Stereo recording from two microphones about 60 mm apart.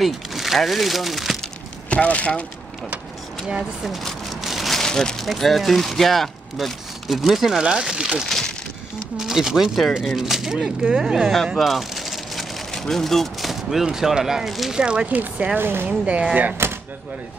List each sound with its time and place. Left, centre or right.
0.0 s speech: centre
1.9 s speech: left
3.4 s speech: centre
3.9 s a sound: centre
5.2 s speech: centre
8.3 s a sound: centre
9.1 s speech: centre
11.5 s speech: centre
14.8 s speech: centre
15.6 s speech: right
15.9 s speech: centre